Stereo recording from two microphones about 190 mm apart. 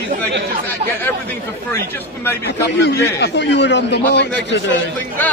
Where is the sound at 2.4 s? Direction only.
60° left (ahead or behind).